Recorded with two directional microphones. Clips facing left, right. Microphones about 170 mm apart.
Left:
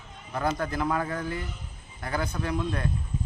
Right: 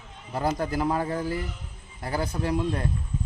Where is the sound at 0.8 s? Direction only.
35° right (ahead or behind).